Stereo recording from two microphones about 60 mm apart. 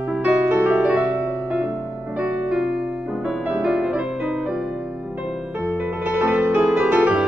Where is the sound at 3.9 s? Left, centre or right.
Centre.